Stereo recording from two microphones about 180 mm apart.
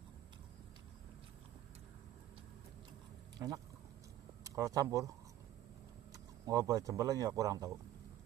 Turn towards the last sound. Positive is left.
turn(degrees=-20)  # may be behind; listen again after turning